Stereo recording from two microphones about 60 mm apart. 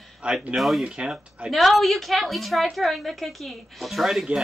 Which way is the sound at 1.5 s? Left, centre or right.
Centre.